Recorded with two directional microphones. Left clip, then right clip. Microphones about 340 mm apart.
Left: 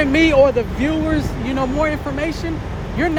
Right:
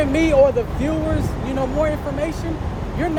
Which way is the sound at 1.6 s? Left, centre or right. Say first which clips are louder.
Left 1 dB; left.